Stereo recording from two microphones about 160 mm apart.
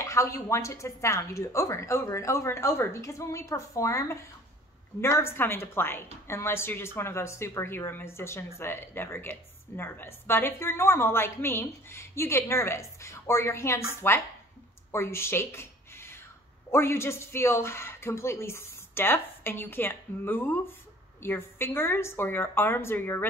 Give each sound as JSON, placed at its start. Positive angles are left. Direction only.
{"t": 0.0, "sound": "speech", "side_deg": 20}
{"t": 14.9, "sound": "a sound", "side_deg": 15}
{"t": 16.7, "sound": "speech", "side_deg": 15}